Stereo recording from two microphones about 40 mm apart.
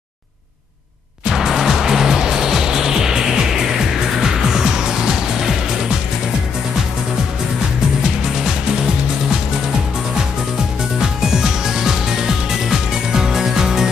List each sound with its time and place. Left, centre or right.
1.2 s music: centre
11.0 s music: centre